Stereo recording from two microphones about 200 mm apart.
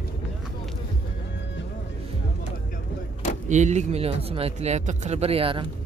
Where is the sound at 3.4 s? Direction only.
35° right (ahead or behind).